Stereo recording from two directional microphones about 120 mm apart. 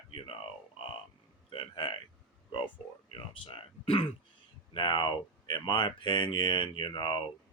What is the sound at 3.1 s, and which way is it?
Speech, 45° left (ahead or behind).